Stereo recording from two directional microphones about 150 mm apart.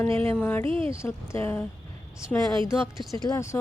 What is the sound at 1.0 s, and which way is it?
Speech, 15° left (ahead or behind).